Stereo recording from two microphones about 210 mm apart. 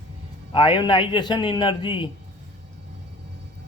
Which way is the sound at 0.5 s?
25° left (ahead or behind).